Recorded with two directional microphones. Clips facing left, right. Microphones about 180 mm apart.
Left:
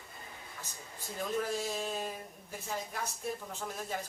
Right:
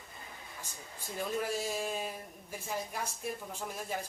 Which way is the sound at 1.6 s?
10° right (ahead or behind).